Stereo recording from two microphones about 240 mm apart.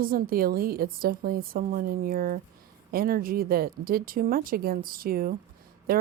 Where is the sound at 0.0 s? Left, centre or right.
Right.